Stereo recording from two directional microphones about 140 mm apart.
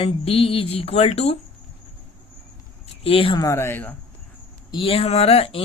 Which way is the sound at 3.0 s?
40° left (ahead or behind).